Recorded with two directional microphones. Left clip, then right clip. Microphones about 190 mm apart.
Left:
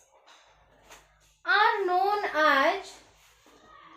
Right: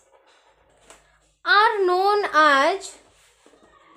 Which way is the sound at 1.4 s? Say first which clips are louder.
Right 6 dB; 50° right (ahead or behind).